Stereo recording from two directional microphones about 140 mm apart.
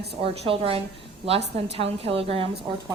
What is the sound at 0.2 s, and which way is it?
A woman's voice, 40° right (ahead or behind).